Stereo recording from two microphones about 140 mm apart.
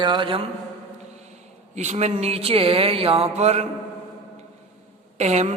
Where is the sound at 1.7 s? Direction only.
55° right (ahead or behind).